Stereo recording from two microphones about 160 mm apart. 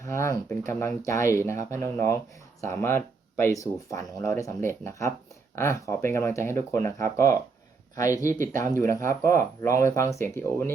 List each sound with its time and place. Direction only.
0.0 s speech: 15° left (ahead or behind)
8.3 s speech: 55° right (ahead or behind)
8.9 s speech: 20° left (ahead or behind)